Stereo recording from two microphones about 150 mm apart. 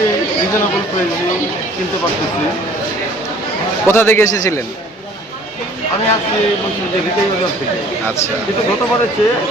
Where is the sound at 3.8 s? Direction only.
15° left (ahead or behind).